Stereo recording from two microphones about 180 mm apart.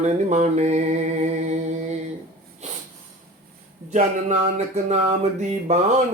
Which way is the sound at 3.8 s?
40° right (ahead or behind).